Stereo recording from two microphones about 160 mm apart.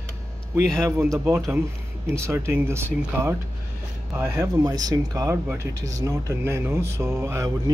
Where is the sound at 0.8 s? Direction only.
15° right (ahead or behind).